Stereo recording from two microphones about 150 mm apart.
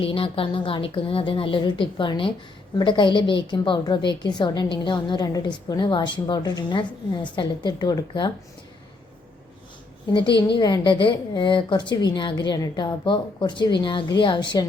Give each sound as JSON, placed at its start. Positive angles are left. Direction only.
{"t": 0.0, "sound": "a woman's voice", "side_deg": 40}
{"t": 10.2, "sound": "a woman's voice", "side_deg": 30}